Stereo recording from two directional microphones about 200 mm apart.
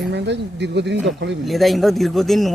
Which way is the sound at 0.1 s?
60° right (ahead or behind).